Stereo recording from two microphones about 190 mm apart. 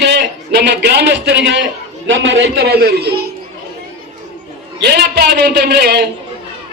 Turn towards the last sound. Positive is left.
turn(degrees=-60)  # may be behind; listen again after turning